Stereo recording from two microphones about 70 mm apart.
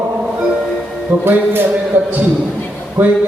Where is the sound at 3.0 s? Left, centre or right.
Right.